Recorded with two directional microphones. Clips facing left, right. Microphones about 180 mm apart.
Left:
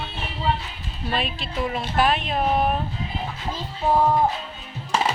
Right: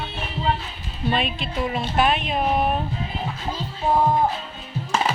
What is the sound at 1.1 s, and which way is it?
Speech, centre (ahead or behind).